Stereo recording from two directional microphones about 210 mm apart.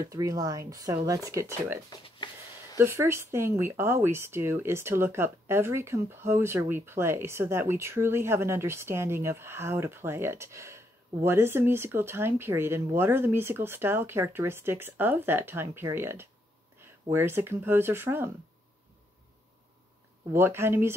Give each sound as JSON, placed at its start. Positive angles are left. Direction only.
{"t": 0.0, "sound": "speech", "side_deg": -15}
{"t": 1.9, "sound": "speech", "side_deg": 25}
{"t": 2.8, "sound": "speech", "side_deg": -10}
{"t": 20.3, "sound": "speech", "side_deg": -10}